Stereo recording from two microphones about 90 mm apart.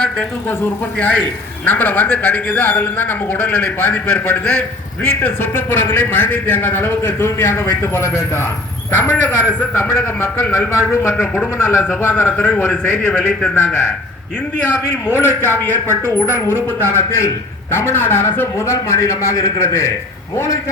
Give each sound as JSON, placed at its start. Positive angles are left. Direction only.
{"t": 0.6, "sound": "a man's voice", "side_deg": 20}
{"t": 5.2, "sound": "a man's voice", "side_deg": 25}
{"t": 14.7, "sound": "a man's voice", "side_deg": 25}